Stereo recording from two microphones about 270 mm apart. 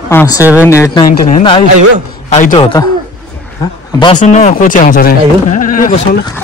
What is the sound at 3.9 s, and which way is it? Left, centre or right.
Speech, centre.